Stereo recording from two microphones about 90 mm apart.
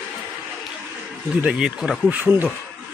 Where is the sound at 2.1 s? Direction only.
20° right (ahead or behind).